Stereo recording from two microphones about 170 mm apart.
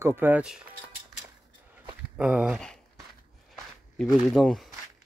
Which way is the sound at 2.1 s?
5° right (ahead or behind).